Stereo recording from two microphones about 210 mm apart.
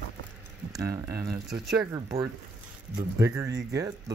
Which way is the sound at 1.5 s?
Centre (ahead or behind).